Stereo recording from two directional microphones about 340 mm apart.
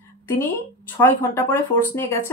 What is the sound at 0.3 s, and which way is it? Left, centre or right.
Speech, centre.